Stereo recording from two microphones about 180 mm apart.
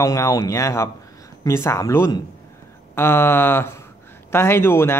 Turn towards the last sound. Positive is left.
turn(degrees=15)  # may be behind; listen again after turning